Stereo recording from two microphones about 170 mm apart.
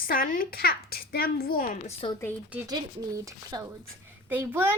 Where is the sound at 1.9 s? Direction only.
35° left (ahead or behind).